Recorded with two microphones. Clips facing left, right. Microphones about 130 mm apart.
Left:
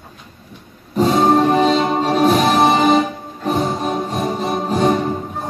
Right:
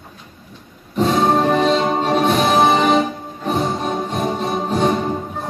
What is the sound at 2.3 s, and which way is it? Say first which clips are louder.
Music: left 1 dB; 35° left (ahead or behind).